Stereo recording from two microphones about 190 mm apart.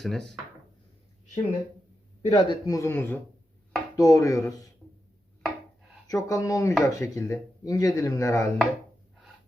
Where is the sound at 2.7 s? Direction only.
15° left (ahead or behind).